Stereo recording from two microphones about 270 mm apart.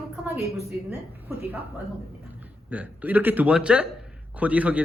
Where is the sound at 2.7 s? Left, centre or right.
Centre.